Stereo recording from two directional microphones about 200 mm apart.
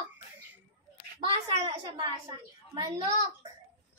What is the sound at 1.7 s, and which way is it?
A child's voice, 20° right (ahead or behind).